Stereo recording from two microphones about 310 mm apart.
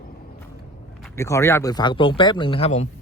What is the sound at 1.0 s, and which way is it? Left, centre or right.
Speech, centre.